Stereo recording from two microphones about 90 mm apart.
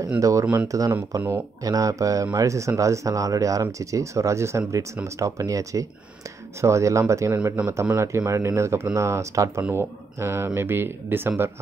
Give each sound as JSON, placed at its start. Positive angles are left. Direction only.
{"t": 0.2, "sound": "speech", "side_deg": -35}